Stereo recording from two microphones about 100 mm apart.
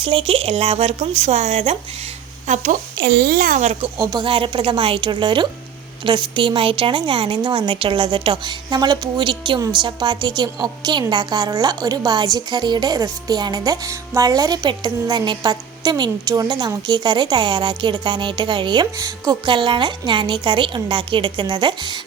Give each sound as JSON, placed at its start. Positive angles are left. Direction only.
{"t": 0.0, "sound": "speech", "side_deg": -65}
{"t": 3.9, "sound": "a woman's voice", "side_deg": -40}
{"t": 4.3, "sound": "a woman's voice", "side_deg": -55}
{"t": 18.9, "sound": "a woman's voice", "side_deg": -35}
{"t": 19.5, "sound": "a woman's voice", "side_deg": -55}